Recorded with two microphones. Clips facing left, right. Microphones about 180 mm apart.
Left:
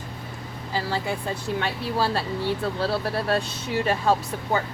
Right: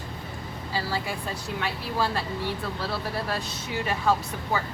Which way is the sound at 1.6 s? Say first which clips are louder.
Left 1 dB; 30° left (ahead or behind).